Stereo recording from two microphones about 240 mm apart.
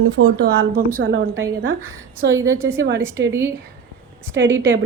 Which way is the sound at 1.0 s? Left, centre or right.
Right.